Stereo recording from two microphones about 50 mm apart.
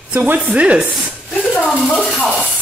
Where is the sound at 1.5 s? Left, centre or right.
Centre.